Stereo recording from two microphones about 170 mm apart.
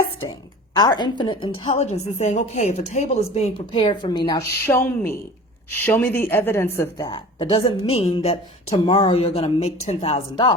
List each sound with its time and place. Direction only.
0.8 s a woman's voice: 25° left (ahead or behind)
4.3 s a woman's voice: 15° left (ahead or behind)